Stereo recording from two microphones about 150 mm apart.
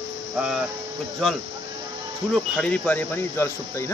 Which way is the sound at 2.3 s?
5° left (ahead or behind).